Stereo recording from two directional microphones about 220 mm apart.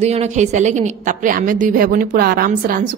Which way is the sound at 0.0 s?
30° right (ahead or behind).